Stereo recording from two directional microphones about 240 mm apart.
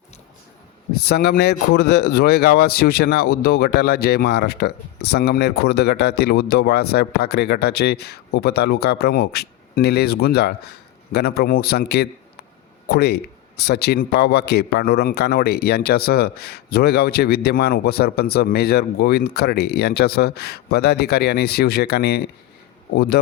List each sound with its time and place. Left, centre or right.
1.0 s a man's voice: left